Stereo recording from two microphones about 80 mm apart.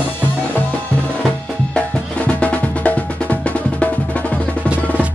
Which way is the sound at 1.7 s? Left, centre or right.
Centre.